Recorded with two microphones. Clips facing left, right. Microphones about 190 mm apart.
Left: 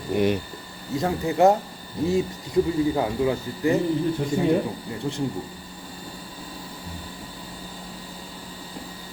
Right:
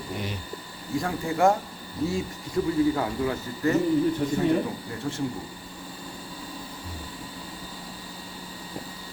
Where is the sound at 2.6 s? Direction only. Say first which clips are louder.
Left 2 dB; 20° left (ahead or behind).